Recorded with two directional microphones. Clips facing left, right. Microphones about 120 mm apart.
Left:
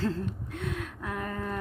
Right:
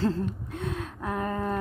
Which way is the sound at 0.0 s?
30° right (ahead or behind).